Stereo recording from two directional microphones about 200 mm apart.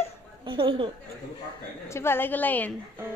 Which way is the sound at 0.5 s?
25° right (ahead or behind).